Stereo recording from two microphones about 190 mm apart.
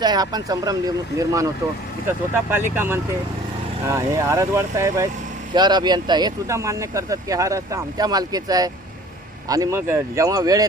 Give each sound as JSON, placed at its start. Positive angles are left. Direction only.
{"t": 0.0, "sound": "speech", "side_deg": -20}